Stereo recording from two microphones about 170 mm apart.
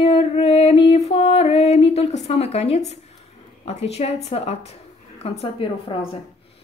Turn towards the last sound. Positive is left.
turn(degrees=35)  # may be behind; listen again after turning